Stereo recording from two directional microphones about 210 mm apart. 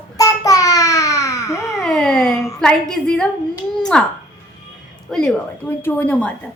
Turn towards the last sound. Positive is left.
turn(degrees=5)  # may be behind; listen again after turning